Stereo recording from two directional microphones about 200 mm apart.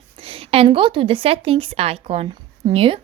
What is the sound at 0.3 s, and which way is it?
Speech, 30° right (ahead or behind).